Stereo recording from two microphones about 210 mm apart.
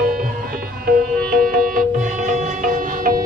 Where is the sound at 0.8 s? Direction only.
45° right (ahead or behind).